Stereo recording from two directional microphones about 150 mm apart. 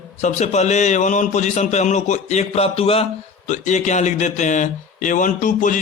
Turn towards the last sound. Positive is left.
turn(degrees=60)  # may be behind; listen again after turning